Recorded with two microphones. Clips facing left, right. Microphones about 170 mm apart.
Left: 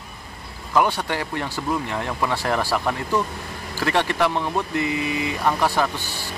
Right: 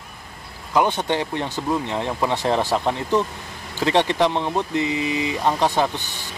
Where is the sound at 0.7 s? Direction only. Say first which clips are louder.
Right 1 dB; 20° right (ahead or behind).